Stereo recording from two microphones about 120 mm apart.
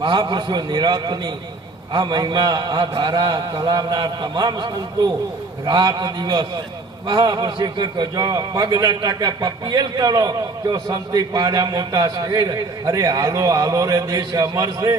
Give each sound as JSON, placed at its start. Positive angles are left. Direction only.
{"t": 0.0, "sound": "a man's voice", "side_deg": -40}